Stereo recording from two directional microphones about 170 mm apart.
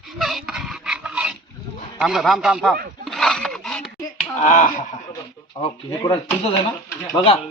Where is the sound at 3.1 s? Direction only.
Centre (ahead or behind).